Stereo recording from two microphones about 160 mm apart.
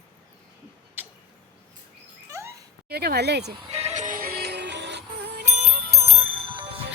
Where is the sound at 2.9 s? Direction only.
85° right.